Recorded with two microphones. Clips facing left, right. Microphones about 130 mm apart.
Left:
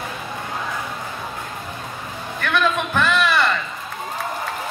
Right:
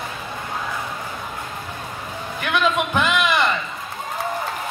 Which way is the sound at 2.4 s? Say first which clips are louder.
Even; 15° right (ahead or behind).